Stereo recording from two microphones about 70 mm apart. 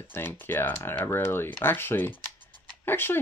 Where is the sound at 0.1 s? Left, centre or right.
Left.